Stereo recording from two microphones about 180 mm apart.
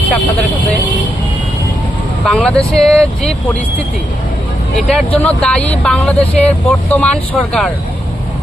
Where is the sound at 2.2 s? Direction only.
5° left (ahead or behind).